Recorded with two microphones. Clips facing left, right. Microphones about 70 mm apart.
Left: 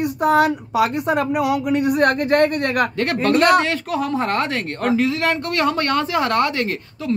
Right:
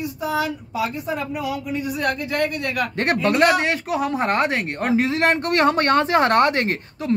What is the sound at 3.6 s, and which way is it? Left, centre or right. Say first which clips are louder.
Speech: left 1 dB; centre.